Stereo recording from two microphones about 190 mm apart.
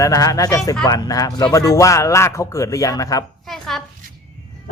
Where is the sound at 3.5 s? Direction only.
Centre (ahead or behind).